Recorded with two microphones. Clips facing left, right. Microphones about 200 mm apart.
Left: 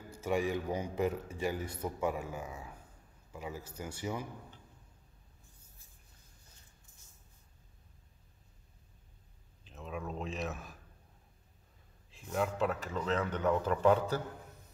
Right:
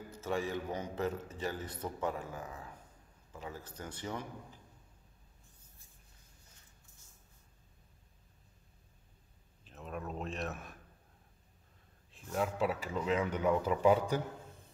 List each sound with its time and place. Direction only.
0.1 s a man's voice: 15° left (ahead or behind)
9.7 s a sound: centre (ahead or behind)
12.1 s speech: centre (ahead or behind)